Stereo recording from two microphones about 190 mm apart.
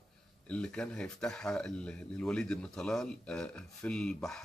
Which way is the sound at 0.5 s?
5° left (ahead or behind).